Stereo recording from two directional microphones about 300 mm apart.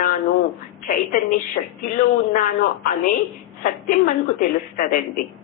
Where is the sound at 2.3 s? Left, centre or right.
Left.